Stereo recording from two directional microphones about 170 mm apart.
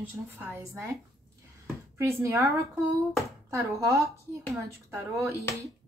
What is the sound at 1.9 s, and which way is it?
Speech, 15° right (ahead or behind).